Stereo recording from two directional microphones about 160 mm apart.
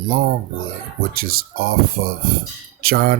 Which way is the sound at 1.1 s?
70° right (ahead or behind).